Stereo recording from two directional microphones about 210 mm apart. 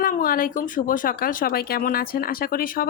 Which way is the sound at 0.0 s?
40° left (ahead or behind).